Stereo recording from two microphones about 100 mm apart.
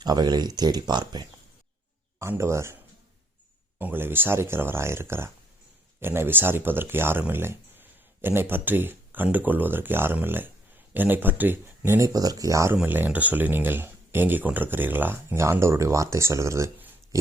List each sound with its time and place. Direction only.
0.0 s speech: 45° right (ahead or behind)
2.1 s speech: 25° right (ahead or behind)
3.8 s speech: 20° right (ahead or behind)
12.7 s speech: 20° right (ahead or behind)